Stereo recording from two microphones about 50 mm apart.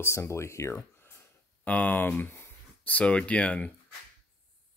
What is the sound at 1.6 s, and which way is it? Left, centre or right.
Speech, left.